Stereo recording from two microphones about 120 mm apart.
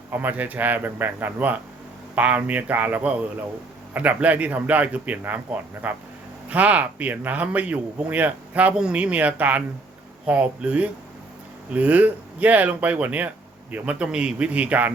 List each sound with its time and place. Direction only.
0.1 s speech: 15° right (ahead or behind)